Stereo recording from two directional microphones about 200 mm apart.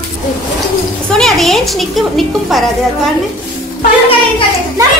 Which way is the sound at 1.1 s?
Centre (ahead or behind).